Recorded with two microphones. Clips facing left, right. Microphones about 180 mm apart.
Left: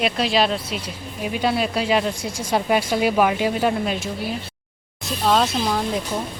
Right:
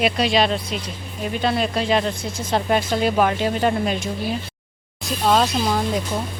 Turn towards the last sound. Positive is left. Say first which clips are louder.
# right 1 dB
turn(degrees=0)  # may be behind; listen again after turning